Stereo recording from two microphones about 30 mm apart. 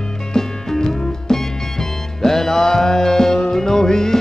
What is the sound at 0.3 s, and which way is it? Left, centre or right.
Music, centre.